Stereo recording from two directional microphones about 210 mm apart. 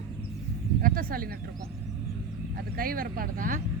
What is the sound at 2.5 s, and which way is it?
Speech, 45° right (ahead or behind).